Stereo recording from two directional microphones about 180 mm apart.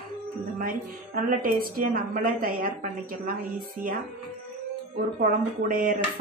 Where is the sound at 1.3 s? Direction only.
50° right (ahead or behind).